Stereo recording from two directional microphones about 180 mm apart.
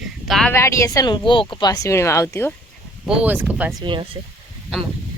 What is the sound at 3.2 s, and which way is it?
Speech, 10° right (ahead or behind).